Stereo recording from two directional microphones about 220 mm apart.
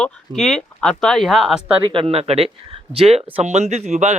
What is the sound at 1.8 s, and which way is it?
Speech, 25° right (ahead or behind).